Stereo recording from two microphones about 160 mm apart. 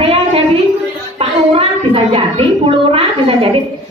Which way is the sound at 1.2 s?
35° right (ahead or behind).